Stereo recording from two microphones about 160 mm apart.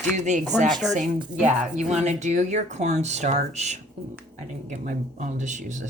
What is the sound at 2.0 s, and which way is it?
Speech, 45° right (ahead or behind).